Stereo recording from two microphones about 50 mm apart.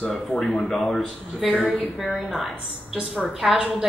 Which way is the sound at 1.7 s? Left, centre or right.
Centre.